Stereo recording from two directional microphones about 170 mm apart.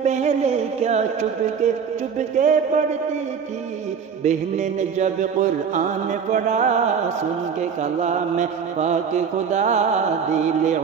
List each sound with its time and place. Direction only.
0.0 s music: 45° right (ahead or behind)
2.1 s speech: 45° right (ahead or behind)
4.2 s speech: 45° right (ahead or behind)
7.8 s speech: 45° right (ahead or behind)